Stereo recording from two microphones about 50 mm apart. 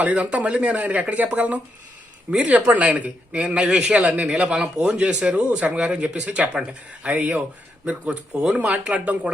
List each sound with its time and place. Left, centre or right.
0.0 s speech: right
3.4 s a man's voice: centre